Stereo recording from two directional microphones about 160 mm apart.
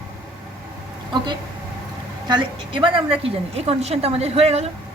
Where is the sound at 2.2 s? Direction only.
30° right (ahead or behind).